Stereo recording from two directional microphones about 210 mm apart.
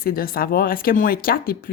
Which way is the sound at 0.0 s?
45° left (ahead or behind).